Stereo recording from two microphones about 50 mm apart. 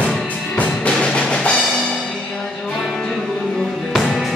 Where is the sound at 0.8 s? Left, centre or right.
Centre.